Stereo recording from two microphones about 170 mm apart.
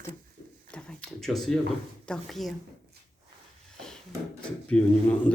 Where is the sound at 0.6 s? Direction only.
5° left (ahead or behind).